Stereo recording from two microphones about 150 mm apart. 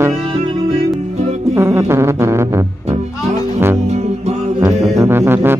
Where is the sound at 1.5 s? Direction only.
15° right (ahead or behind).